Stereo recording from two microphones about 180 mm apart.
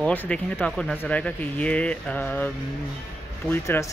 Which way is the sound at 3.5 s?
15° left (ahead or behind).